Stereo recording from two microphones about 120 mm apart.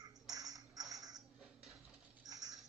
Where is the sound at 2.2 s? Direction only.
30° right (ahead or behind).